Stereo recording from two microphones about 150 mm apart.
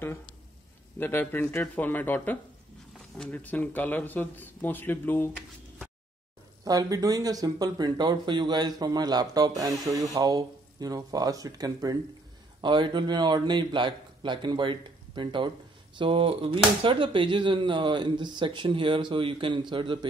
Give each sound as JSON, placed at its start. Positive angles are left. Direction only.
{"t": 0.9, "sound": "speech", "side_deg": 15}
{"t": 6.6, "sound": "speech", "side_deg": -25}